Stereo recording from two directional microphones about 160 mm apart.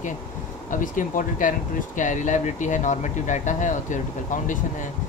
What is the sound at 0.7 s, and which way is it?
Speech, 55° left (ahead or behind).